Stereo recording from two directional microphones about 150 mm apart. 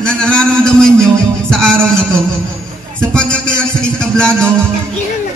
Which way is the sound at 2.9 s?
5° left (ahead or behind).